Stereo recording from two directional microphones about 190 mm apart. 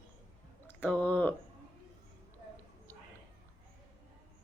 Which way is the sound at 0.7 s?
10° left (ahead or behind).